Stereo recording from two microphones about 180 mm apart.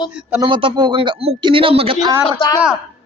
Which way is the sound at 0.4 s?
25° right (ahead or behind).